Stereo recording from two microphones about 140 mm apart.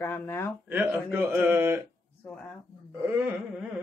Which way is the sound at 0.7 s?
15° right (ahead or behind).